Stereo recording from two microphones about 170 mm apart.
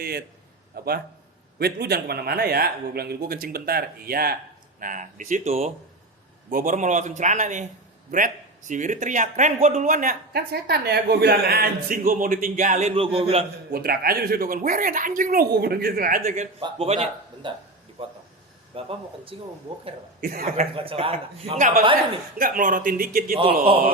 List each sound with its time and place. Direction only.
0.0 s a man's voice: 65° right (ahead or behind)
4.8 s speech: 50° right (ahead or behind)
6.5 s speech: 55° right (ahead or behind)
13.1 s a man's voice: 35° right (ahead or behind)
13.7 s a man's voice: 65° right (ahead or behind)
16.6 s a man's voice: 30° right (ahead or behind)
18.7 s a man's voice: 30° right (ahead or behind)
20.2 s a man's voice: 60° right (ahead or behind)
20.6 s a man's voice: 35° right (ahead or behind)
22.4 s a man's voice: 55° right (ahead or behind)